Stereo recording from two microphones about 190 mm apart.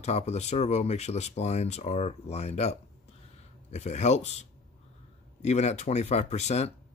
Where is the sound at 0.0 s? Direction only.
35° left (ahead or behind).